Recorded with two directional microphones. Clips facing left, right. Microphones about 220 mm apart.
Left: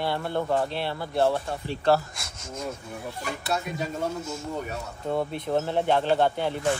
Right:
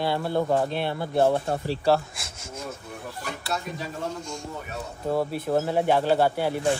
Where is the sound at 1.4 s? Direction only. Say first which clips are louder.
Right 5 dB; 40° right (ahead or behind).